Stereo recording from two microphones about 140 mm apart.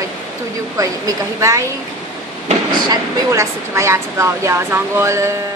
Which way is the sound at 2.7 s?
25° right (ahead or behind).